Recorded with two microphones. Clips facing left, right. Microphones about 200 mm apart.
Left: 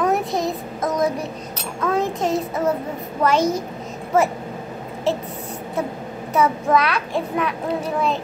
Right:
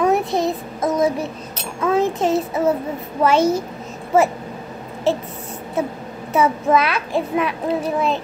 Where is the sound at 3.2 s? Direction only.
25° right (ahead or behind).